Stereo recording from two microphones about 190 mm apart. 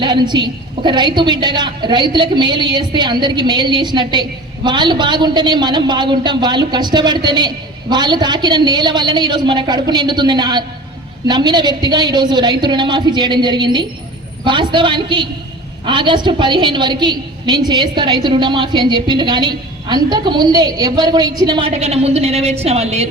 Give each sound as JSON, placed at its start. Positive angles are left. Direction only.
{"t": 0.0, "sound": "a woman's voice", "side_deg": -25}